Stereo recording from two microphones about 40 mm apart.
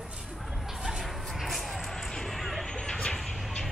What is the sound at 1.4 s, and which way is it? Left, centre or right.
Music, centre.